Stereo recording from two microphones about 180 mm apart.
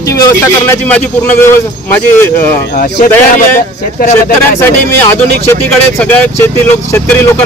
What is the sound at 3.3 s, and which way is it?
Speech, 45° left (ahead or behind).